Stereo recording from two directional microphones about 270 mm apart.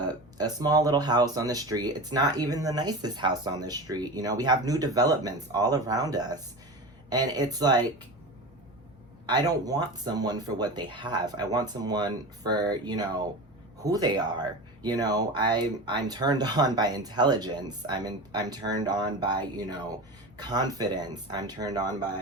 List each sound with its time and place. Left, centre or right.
0.3 s speech: centre
9.2 s speech: centre